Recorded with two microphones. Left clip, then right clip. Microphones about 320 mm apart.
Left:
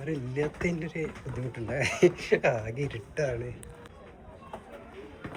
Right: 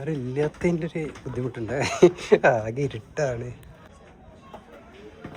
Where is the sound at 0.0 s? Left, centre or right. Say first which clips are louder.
Right 5 dB; right.